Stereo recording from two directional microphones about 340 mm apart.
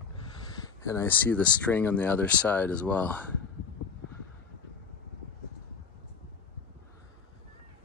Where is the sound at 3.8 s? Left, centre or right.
Left.